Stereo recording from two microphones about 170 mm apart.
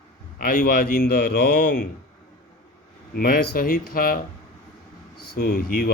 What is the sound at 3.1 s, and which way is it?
Speech, 60° left (ahead or behind).